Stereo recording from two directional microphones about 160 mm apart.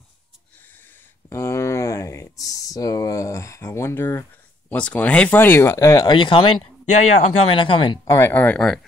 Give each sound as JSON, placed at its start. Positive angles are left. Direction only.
{"t": 1.3, "sound": "a sound", "side_deg": 15}
{"t": 4.6, "sound": "speech", "side_deg": 10}
{"t": 8.1, "sound": "speech", "side_deg": 15}